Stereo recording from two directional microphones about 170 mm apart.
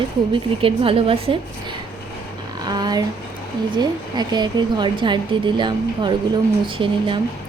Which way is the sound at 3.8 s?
25° right (ahead or behind).